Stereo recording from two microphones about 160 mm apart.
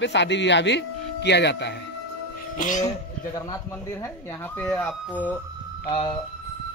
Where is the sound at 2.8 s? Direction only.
20° left (ahead or behind).